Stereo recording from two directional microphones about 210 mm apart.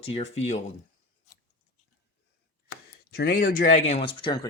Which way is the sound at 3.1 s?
45° left (ahead or behind).